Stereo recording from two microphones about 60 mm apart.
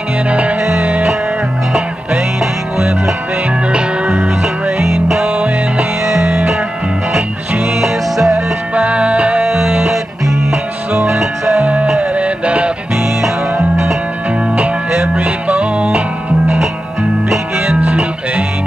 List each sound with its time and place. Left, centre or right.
0.3 s music: right
3.7 s music: right
7.8 s music: centre
8.7 s music: right
15.1 s music: right
17.3 s music: centre